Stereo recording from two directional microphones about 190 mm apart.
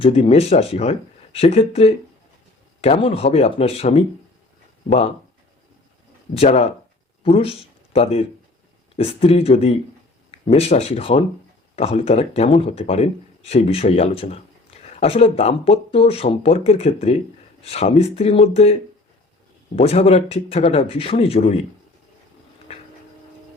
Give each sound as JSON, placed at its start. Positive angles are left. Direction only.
{"t": 0.0, "sound": "speech", "side_deg": 30}
{"t": 6.3, "sound": "speech", "side_deg": 35}